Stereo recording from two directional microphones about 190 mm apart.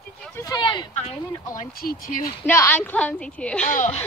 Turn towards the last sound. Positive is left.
turn(degrees=40)  # may be behind; listen again after turning